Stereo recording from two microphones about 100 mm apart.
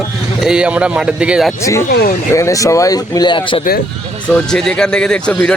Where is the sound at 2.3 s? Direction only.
35° left (ahead or behind); by 3.6 s 55° left (ahead or behind).